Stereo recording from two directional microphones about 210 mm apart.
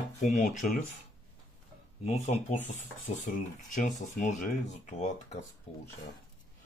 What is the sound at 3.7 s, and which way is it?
Speech, 35° left (ahead or behind).